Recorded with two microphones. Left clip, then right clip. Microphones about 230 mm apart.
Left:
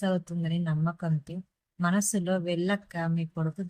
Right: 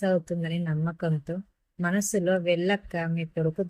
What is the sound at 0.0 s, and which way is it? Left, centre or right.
Speech, centre.